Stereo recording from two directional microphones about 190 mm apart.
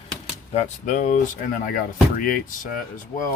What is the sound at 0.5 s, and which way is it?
Speech, 40° left (ahead or behind).